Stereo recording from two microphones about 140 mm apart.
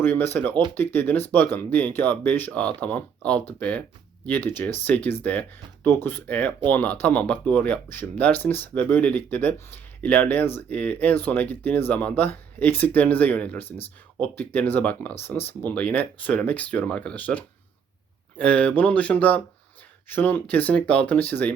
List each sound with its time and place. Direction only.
0.0 s speech: 15° left (ahead or behind)